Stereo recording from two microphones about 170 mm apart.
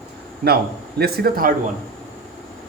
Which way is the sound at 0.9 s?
65° right (ahead or behind).